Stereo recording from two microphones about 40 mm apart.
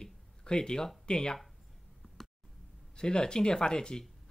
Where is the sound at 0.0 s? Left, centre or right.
Centre.